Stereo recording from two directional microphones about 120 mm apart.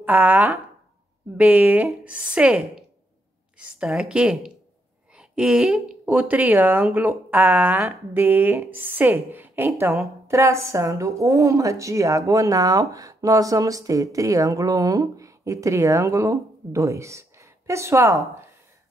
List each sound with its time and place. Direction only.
0.0 s a woman's voice: 15° right (ahead or behind)